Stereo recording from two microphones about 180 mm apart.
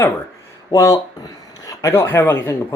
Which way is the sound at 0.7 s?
20° left (ahead or behind).